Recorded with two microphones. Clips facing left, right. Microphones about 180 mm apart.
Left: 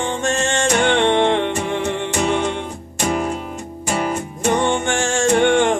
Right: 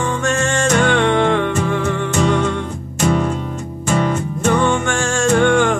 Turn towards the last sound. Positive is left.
turn(degrees=25)  # may be behind; listen again after turning